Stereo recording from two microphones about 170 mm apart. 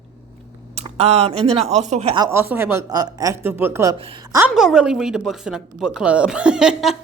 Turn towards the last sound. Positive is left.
turn(degrees=-5)  # may be behind; listen again after turning